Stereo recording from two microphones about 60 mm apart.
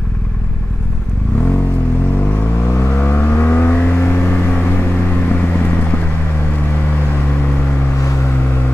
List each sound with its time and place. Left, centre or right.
2.6 s vehicle: left